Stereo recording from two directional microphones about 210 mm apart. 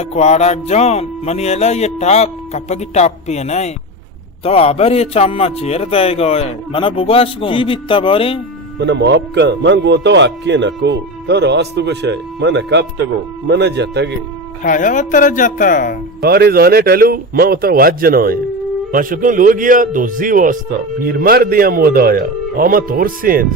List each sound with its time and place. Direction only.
0.0 s a man's voice: 30° left (ahead or behind)
8.8 s a man's voice: 55° right (ahead or behind)
14.6 s speech: 40° left (ahead or behind)
16.2 s a man's voice: 45° right (ahead or behind)